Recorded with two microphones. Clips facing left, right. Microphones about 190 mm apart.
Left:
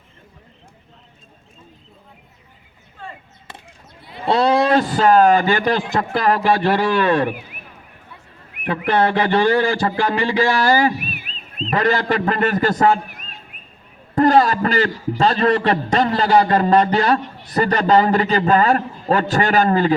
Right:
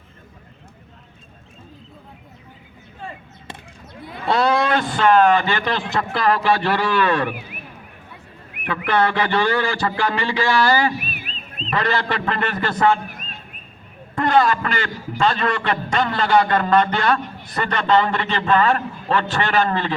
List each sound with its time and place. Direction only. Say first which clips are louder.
4.3 s a man's voice: left 3 dB; 30° left (ahead or behind)
8.6 s a man's voice: left 2 dB; 40° left (ahead or behind)
14.2 s a man's voice: left 4 dB; 40° left (ahead or behind)